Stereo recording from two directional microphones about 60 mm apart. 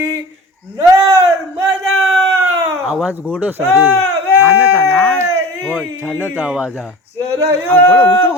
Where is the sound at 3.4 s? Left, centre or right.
Right.